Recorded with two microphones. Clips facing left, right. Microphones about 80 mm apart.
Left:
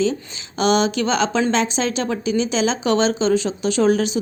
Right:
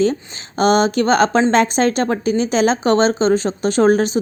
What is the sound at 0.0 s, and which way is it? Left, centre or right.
Speech, right.